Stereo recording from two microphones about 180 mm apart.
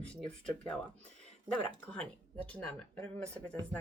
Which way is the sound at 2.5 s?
5° left (ahead or behind).